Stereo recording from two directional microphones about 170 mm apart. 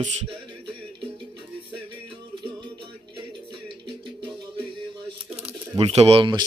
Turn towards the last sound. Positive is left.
turn(degrees=-30)  # may be behind; listen again after turning